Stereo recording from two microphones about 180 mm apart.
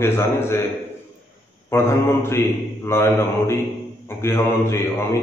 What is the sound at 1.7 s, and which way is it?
A man's voice, 15° left (ahead or behind).